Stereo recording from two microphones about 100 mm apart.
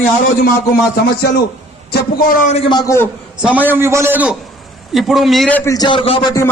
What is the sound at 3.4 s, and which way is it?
Speech, 15° right (ahead or behind).